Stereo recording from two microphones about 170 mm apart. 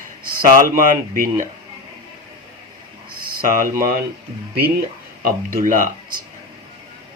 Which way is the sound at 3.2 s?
55° right (ahead or behind).